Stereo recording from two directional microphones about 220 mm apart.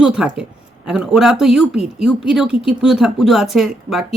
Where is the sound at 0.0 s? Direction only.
5° right (ahead or behind).